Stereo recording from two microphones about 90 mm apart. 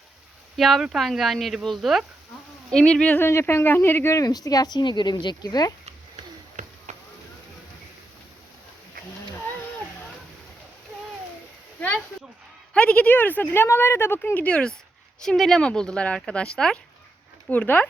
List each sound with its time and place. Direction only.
0.5 s speech: centre (ahead or behind)
2.7 s speech: 10° left (ahead or behind)
3.2 s speech: 25° left (ahead or behind)
4.3 s a woman's voice: 45° left (ahead or behind)
12.7 s speech: 15° left (ahead or behind)